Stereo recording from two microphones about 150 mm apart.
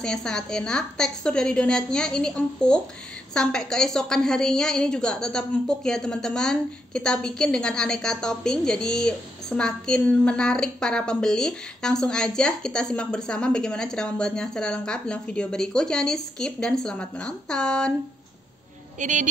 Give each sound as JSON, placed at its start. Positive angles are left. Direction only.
{"t": 0.0, "sound": "a woman's voice", "side_deg": 5}
{"t": 18.9, "sound": "a woman's voice", "side_deg": -55}